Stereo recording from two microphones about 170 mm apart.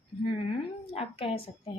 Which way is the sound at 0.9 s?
35° left (ahead or behind).